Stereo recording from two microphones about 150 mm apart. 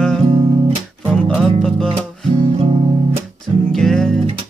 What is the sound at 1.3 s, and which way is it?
Music, 5° left (ahead or behind).